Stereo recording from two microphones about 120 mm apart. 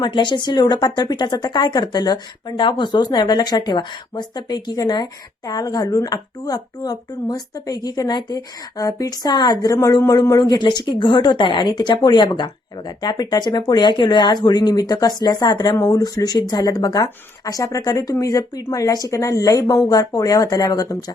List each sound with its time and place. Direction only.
0.0 s speech: 40° left (ahead or behind)
10.4 s speech: 40° left (ahead or behind)